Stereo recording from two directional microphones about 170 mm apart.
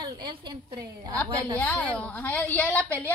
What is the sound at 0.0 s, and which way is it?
Speech, 25° right (ahead or behind).